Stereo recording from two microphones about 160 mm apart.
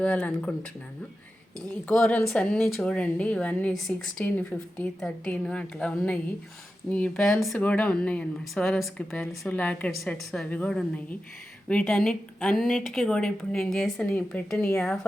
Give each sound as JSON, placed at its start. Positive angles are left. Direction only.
{"t": 0.0, "sound": "speech", "side_deg": 10}
{"t": 1.7, "sound": "a woman's voice", "side_deg": 5}